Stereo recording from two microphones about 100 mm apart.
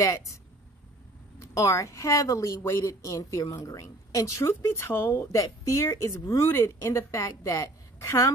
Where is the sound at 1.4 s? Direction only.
30° left (ahead or behind).